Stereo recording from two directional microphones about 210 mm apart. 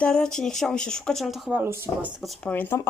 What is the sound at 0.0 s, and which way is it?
Speech, 5° left (ahead or behind).